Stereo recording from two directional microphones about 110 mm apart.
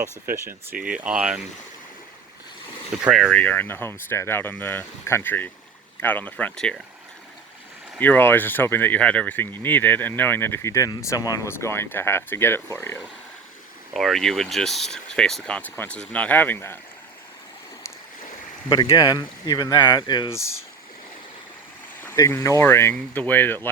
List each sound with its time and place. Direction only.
0.0 s speech: 20° right (ahead or behind)
0.9 s speech: 10° right (ahead or behind)
3.1 s speech: centre (ahead or behind)
3.3 s speech: 15° left (ahead or behind)
7.9 s speech: 15° left (ahead or behind)
13.9 s speech: centre (ahead or behind); by 16.7 s 20° left (ahead or behind)
18.9 s speech: 35° left (ahead or behind)
22.3 s speech: 30° left (ahead or behind)